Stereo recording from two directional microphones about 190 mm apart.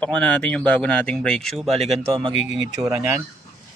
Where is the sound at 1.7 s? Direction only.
35° right (ahead or behind).